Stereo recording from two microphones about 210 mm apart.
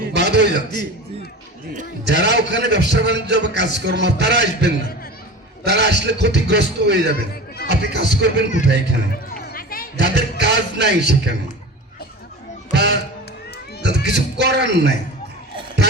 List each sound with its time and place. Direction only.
0.1 s a man's voice: 55° right (ahead or behind)
2.0 s a man's voice: 55° right (ahead or behind)
9.3 s music: 45° left (ahead or behind)
10.0 s speech: 55° right (ahead or behind)
12.7 s speech: 55° right (ahead or behind)